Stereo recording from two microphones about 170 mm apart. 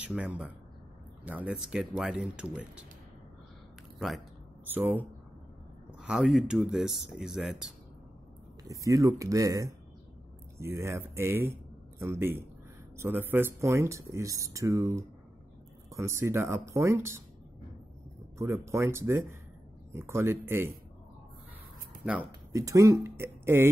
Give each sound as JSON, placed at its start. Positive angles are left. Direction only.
{"t": 0.0, "sound": "speech", "side_deg": -5}
{"t": 4.7, "sound": "speech", "side_deg": -10}
{"t": 8.6, "sound": "speech", "side_deg": -20}
{"t": 18.7, "sound": "speech", "side_deg": -15}
{"t": 22.5, "sound": "speech", "side_deg": -20}